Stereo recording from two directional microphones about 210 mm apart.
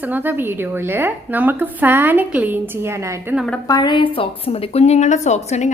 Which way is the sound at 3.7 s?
20° left (ahead or behind).